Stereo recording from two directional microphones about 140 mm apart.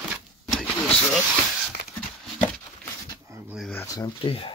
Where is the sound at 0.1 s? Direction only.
Centre (ahead or behind).